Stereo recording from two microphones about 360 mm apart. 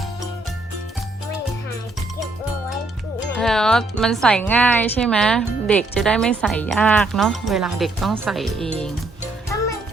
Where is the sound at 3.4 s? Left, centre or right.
Centre.